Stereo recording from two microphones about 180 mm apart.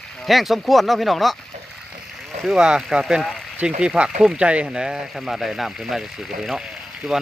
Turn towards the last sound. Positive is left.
turn(degrees=0)  # may be behind; listen again after turning